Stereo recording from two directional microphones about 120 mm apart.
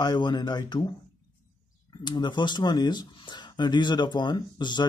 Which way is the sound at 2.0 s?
40° left (ahead or behind).